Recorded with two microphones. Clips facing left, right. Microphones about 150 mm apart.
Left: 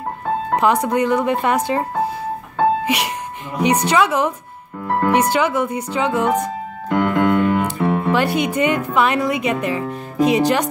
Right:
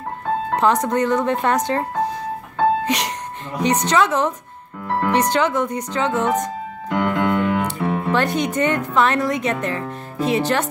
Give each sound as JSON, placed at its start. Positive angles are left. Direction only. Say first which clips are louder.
{"t": 0.6, "sound": "speech", "louder": "left 1 dB", "side_deg": 10}
{"t": 2.8, "sound": "music", "louder": "left 1 dB", "side_deg": 10}
{"t": 3.6, "sound": "speech", "louder": "left 2 dB", "side_deg": 10}
{"t": 6.9, "sound": "music", "louder": "left 3 dB", "side_deg": 50}
{"t": 7.9, "sound": "speech", "louder": "left 1 dB", "side_deg": 10}